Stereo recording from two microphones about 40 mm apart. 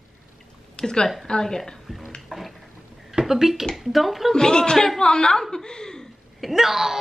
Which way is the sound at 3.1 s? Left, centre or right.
Centre.